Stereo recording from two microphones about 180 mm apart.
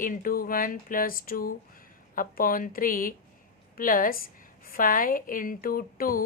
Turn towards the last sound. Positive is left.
turn(degrees=55)  # may be behind; listen again after turning